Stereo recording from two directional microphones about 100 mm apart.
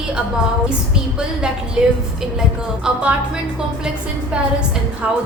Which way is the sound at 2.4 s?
10° right (ahead or behind).